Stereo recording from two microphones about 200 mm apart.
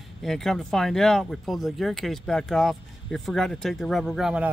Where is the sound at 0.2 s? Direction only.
Centre (ahead or behind).